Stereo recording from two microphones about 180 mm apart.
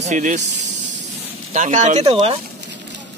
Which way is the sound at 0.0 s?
45° right (ahead or behind).